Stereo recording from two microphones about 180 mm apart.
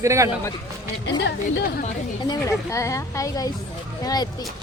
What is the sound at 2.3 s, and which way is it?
Speech, 15° left (ahead or behind).